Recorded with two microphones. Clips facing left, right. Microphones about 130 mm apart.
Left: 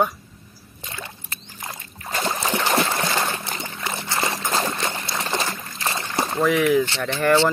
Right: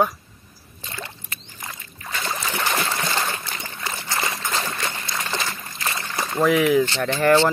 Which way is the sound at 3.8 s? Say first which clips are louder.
Left 1 dB; 20° left (ahead or behind).